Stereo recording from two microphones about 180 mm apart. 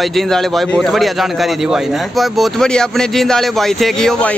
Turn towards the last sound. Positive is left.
turn(degrees=5)  # may be behind; listen again after turning